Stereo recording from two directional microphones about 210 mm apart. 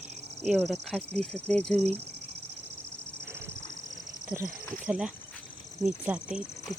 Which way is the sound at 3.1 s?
55° right (ahead or behind).